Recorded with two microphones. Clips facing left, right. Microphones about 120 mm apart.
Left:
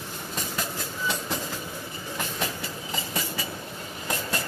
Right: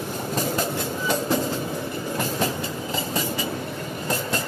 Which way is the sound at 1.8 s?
60° right (ahead or behind).